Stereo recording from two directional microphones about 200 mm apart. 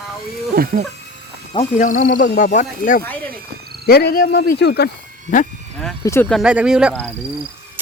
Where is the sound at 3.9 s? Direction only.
50° left (ahead or behind).